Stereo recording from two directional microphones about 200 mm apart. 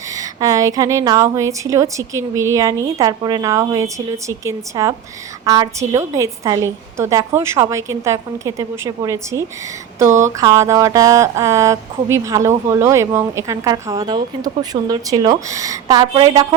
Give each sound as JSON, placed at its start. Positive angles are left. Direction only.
{"t": 0.2, "sound": "a woman's voice", "side_deg": -15}